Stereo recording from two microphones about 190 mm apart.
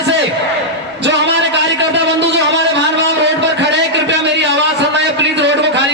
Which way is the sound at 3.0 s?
65° right (ahead or behind).